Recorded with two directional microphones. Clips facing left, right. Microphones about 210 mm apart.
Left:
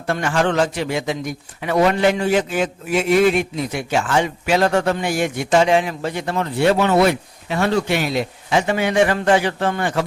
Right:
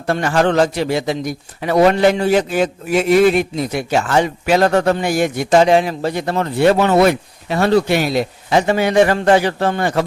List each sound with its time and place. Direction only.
0.1 s a man's voice: 40° right (ahead or behind)